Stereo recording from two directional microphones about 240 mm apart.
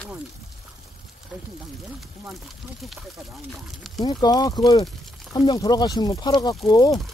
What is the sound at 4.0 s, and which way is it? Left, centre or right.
Speech, centre.